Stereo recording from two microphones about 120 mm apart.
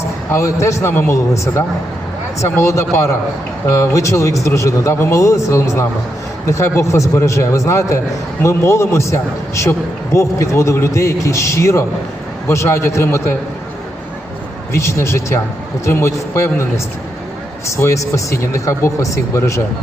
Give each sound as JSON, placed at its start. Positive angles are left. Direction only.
{"t": 0.3, "sound": "a man's voice", "side_deg": 25}
{"t": 14.7, "sound": "a man's voice", "side_deg": 25}